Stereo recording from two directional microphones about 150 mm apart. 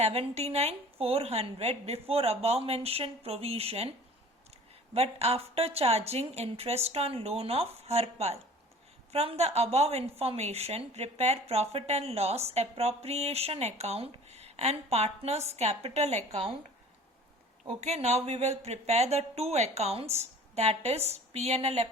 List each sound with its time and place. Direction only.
0.0 s speech: 40° right (ahead or behind)
4.9 s speech: 45° right (ahead or behind)
17.7 s speech: 50° right (ahead or behind)